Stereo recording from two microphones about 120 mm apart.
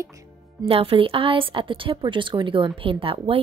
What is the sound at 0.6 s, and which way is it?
A woman's voice, 50° right (ahead or behind).